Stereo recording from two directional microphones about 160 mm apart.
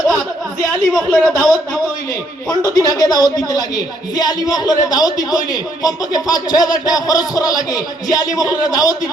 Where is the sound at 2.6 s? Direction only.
25° left (ahead or behind).